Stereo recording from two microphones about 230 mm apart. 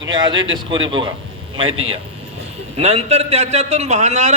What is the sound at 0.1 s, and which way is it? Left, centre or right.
A man's voice, centre.